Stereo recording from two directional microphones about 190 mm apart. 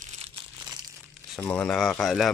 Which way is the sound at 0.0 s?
35° right (ahead or behind).